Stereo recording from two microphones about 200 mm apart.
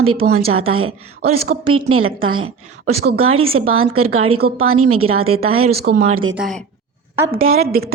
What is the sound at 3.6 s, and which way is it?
A woman's voice, 90° right.